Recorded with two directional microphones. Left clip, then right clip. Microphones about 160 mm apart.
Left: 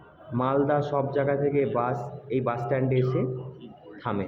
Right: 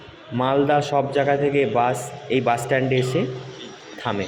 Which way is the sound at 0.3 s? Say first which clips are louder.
Right 5 dB; 15° right (ahead or behind).